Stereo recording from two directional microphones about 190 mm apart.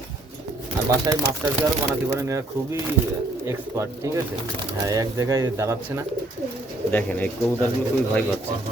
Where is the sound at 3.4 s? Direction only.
15° right (ahead or behind).